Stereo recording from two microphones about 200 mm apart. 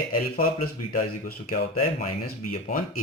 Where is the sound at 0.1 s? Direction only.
45° left (ahead or behind).